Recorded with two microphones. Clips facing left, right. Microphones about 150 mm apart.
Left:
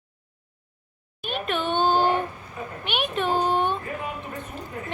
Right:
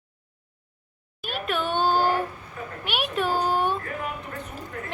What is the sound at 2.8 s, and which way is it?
Speech, 5° right (ahead or behind).